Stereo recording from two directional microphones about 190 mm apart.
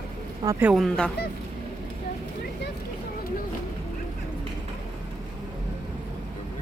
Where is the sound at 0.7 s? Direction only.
Centre (ahead or behind).